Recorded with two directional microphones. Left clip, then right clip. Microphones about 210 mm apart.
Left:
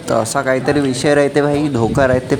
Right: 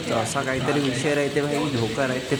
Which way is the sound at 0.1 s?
25° left (ahead or behind).